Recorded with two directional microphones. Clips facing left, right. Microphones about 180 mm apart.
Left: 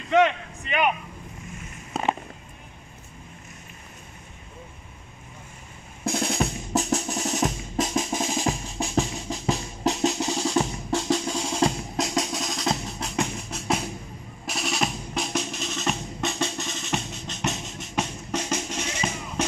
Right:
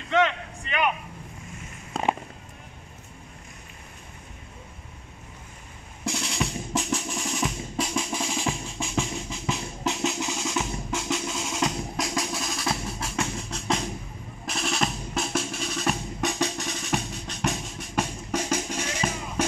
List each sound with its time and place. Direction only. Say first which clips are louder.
0.1 s a sound: left 3 dB; 15° left (ahead or behind)
6.0 s drum: left 4 dB; 45° left (ahead or behind); by 17.4 s 10° right (ahead or behind)
17.5 s music: right 1 dB; 10° right (ahead or behind)